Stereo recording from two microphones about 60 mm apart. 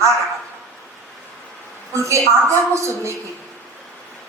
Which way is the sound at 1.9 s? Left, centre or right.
Right.